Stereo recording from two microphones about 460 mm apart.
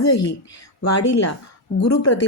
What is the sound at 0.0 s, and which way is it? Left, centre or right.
Speech, left.